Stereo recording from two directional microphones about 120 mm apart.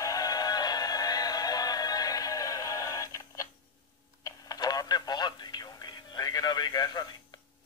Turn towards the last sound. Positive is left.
turn(degrees=35)  # may be behind; listen again after turning